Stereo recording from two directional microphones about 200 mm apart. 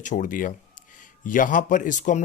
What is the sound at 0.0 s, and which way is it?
Speech, 40° left (ahead or behind).